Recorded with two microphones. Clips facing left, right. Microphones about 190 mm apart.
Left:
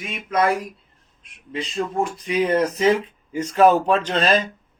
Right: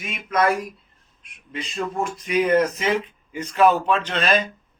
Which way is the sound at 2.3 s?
30° left (ahead or behind).